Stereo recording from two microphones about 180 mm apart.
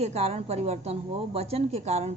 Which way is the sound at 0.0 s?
35° right (ahead or behind).